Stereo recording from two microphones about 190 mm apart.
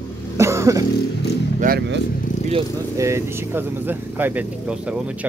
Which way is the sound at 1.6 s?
55° right (ahead or behind).